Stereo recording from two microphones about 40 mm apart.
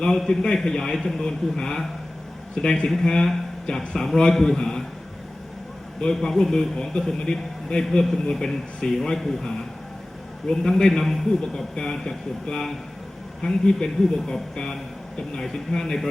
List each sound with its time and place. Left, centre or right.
0.3 s a man's voice: centre
6.0 s a man's voice: centre
11.0 s a man's voice: centre
11.7 s a man's voice: centre